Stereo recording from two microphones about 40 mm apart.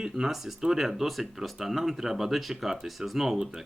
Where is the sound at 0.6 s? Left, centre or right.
Centre.